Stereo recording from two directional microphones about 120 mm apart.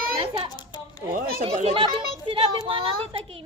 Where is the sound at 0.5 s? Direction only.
35° left (ahead or behind).